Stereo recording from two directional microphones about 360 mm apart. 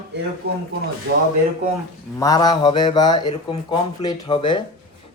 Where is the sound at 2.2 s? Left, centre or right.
Centre.